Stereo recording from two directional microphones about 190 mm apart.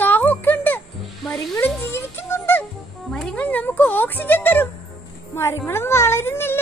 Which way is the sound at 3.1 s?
5° left (ahead or behind).